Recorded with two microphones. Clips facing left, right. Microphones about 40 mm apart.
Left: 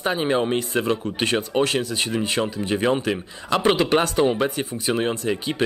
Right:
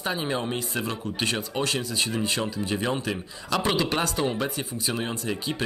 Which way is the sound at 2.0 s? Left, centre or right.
Left.